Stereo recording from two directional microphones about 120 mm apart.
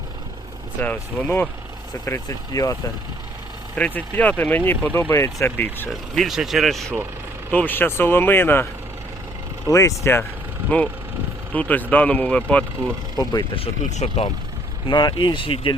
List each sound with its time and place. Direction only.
0.8 s speech: 15° left (ahead or behind)
2.0 s speech: 25° left (ahead or behind)
3.8 s speech: 15° left (ahead or behind)
5.9 s speech: centre (ahead or behind)
7.5 s speech: 15° left (ahead or behind)
9.6 s speech: 25° left (ahead or behind); by 12.6 s 10° left (ahead or behind)
13.9 s speech: 65° left (ahead or behind)
14.8 s speech: 40° left (ahead or behind)